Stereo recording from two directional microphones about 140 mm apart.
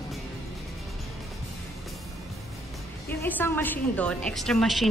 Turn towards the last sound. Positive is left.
turn(degrees=0)  # may be behind; listen again after turning